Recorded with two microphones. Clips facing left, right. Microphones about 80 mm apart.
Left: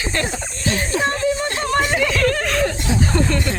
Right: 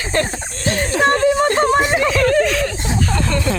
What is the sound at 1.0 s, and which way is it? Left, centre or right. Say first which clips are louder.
Speech: right 8 dB; right.